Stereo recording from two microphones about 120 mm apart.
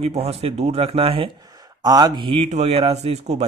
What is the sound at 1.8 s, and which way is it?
Speech, 35° right (ahead or behind).